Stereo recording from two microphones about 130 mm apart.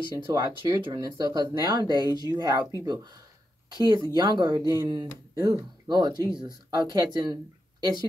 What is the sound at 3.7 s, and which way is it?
Speech, 35° right (ahead or behind).